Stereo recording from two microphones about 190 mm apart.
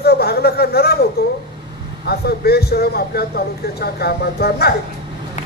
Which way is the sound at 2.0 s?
55° left (ahead or behind).